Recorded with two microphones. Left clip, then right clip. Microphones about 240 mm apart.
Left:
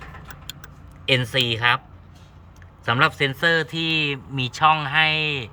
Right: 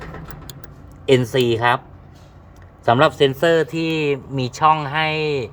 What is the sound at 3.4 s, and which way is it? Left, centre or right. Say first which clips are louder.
Speech: right 3 dB; centre.